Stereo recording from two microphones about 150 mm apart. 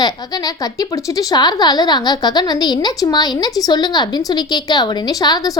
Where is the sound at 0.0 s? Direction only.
25° left (ahead or behind).